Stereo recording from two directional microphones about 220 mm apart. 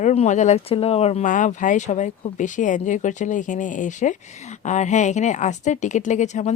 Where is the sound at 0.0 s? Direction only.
30° left (ahead or behind).